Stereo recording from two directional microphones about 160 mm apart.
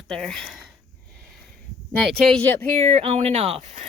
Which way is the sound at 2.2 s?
5° left (ahead or behind).